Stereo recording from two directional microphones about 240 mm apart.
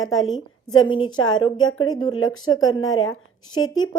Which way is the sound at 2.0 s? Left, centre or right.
Left.